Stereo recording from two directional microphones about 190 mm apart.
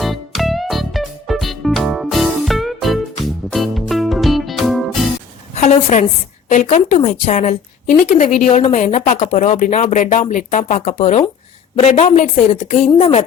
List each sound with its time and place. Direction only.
0.0 s music: centre (ahead or behind)
5.5 s a woman's voice: 40° left (ahead or behind)